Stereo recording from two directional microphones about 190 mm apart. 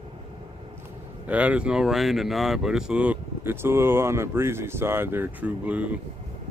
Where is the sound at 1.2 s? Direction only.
5° right (ahead or behind).